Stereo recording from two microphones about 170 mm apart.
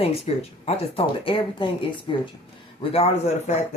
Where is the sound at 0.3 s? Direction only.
35° left (ahead or behind).